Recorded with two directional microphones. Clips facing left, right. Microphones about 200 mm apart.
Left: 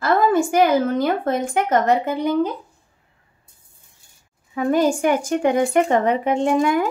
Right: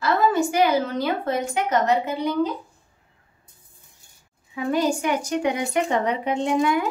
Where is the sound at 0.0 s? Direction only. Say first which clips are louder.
Left 3 dB; 50° left (ahead or behind).